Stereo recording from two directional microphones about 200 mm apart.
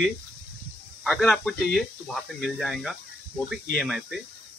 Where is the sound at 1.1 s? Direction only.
Centre (ahead or behind).